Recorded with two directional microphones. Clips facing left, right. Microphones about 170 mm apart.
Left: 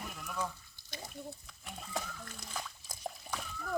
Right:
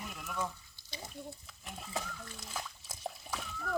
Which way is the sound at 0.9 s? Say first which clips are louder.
Even; 50° left (ahead or behind).